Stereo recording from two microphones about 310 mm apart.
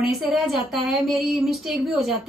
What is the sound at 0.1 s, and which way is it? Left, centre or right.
A woman's voice, centre.